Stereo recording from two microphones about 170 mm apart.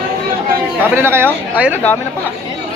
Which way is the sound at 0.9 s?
15° right (ahead or behind).